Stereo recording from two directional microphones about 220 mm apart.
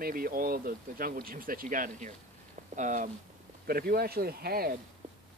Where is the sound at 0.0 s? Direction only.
40° right (ahead or behind).